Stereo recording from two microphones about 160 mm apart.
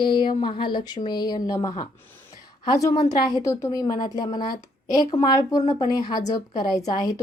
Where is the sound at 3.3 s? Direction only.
20° left (ahead or behind).